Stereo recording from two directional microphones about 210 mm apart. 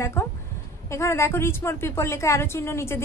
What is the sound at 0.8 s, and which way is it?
A woman's voice, 15° left (ahead or behind).